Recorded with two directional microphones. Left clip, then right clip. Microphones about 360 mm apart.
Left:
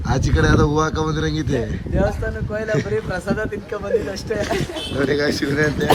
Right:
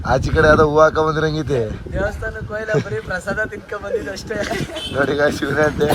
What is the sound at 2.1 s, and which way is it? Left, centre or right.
Speech, left.